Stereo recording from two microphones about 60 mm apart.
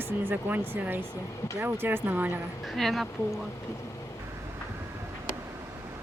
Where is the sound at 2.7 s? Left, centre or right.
Centre.